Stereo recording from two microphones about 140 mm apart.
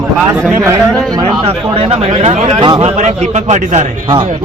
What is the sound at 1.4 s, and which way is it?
A man's voice, 45° right (ahead or behind).